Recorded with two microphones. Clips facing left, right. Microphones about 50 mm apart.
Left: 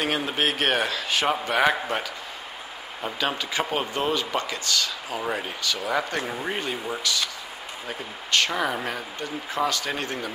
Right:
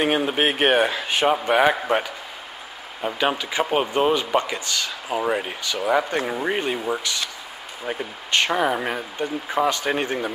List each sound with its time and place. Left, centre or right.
0.0 s speech: centre